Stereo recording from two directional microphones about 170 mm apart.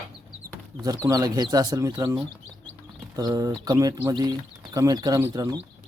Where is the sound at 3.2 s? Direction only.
20° right (ahead or behind).